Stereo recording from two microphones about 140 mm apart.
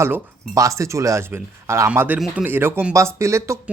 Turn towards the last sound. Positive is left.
turn(degrees=-20)  # may be behind; listen again after turning